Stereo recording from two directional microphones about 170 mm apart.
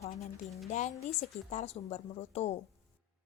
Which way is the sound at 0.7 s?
45° left (ahead or behind).